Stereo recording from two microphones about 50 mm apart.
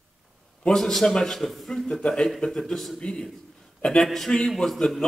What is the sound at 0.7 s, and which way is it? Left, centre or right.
A man's voice, centre.